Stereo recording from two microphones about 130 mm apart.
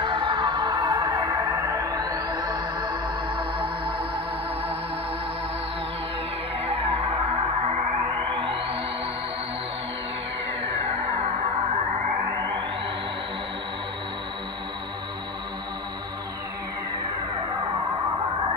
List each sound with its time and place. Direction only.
0.0 s music: 40° right (ahead or behind)
6.6 s music: 50° right (ahead or behind)
11.1 s music: 50° right (ahead or behind)